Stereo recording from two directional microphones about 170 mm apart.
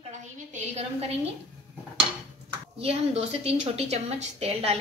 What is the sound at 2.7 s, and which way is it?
A woman's voice, 35° right (ahead or behind).